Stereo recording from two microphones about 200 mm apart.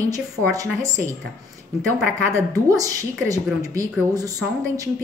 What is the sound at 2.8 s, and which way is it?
A woman's voice, 15° right (ahead or behind).